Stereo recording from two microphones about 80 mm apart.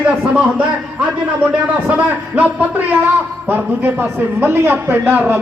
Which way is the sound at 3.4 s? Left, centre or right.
Right.